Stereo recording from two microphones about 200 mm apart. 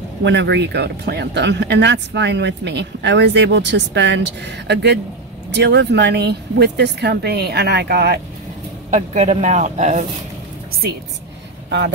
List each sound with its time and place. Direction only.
0.2 s speech: 60° right (ahead or behind)
8.9 s speech: 35° right (ahead or behind)